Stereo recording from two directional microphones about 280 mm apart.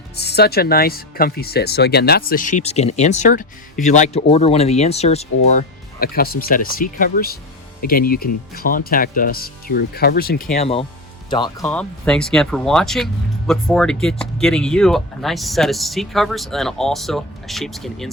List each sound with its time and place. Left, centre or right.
0.2 s speech: left; by 18.1 s centre